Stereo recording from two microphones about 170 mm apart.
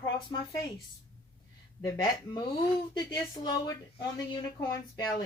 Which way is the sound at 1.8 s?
25° left (ahead or behind).